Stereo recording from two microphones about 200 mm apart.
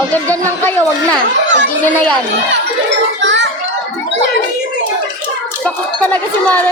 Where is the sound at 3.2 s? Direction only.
65° right (ahead or behind).